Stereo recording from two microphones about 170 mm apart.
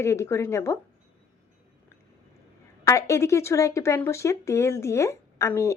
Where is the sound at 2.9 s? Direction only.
15° left (ahead or behind).